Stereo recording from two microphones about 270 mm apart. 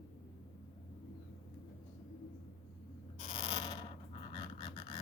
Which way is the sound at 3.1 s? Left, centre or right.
Centre.